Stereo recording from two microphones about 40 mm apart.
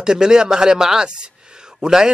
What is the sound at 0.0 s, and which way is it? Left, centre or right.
A man's voice, centre.